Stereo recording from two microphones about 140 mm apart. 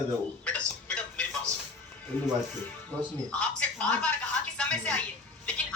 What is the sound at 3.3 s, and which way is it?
Speech, 10° left (ahead or behind).